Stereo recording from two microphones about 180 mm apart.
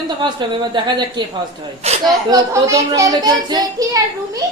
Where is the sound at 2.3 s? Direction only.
15° right (ahead or behind).